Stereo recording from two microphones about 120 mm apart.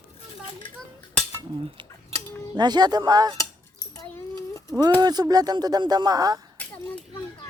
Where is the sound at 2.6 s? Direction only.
35° right (ahead or behind).